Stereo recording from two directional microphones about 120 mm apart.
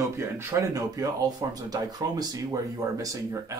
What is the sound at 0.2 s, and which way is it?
Speech, 20° right (ahead or behind).